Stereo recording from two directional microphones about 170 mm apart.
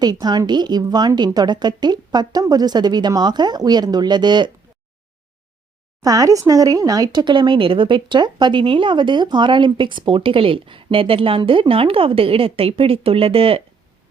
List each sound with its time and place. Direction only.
0.0 s speech: 25° right (ahead or behind)
6.0 s speech: 20° right (ahead or behind)